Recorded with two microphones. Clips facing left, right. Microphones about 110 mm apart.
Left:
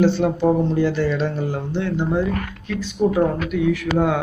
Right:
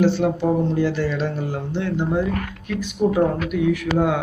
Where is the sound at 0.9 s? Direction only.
10° right (ahead or behind).